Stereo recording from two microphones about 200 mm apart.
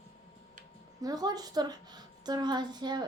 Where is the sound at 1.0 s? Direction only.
20° right (ahead or behind).